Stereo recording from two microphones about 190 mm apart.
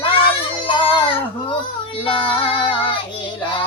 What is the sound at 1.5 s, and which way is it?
Child singing, 25° left (ahead or behind).